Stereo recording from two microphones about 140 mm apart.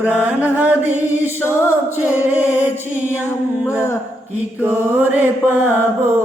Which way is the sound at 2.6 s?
15° left (ahead or behind).